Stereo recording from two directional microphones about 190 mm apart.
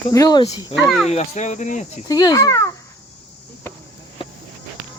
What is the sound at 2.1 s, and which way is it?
Speech, 20° left (ahead or behind).